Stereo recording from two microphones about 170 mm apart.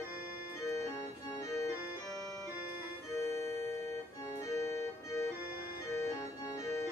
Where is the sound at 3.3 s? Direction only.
15° left (ahead or behind).